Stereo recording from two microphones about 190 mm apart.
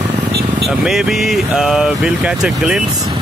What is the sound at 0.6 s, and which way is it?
Speech, centre (ahead or behind).